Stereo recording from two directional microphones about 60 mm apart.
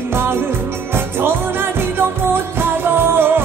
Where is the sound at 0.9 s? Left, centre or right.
Right.